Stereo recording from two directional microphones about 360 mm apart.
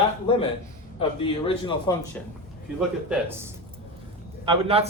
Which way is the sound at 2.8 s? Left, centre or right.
Centre.